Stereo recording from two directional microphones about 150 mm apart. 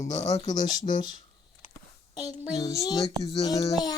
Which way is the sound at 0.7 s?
60° left (ahead or behind).